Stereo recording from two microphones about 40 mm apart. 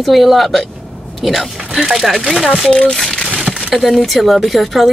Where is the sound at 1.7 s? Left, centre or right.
Centre.